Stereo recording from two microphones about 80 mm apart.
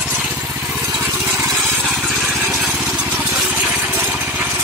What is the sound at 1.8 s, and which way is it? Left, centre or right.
Vehicle, centre.